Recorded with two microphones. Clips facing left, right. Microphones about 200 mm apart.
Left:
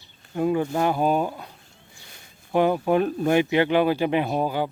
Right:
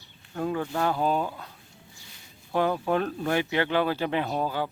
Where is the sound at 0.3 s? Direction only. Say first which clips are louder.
Left 6 dB; 15° left (ahead or behind).